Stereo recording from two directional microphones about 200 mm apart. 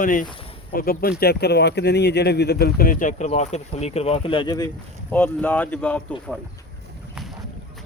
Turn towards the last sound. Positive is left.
turn(degrees=5)  # may be behind; listen again after turning